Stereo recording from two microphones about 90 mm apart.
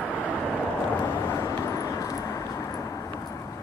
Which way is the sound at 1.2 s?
30° left (ahead or behind).